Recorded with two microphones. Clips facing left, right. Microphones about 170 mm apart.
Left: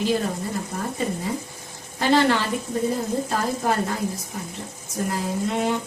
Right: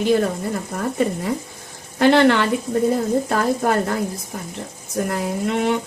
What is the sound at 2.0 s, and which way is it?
Speech, 65° right (ahead or behind).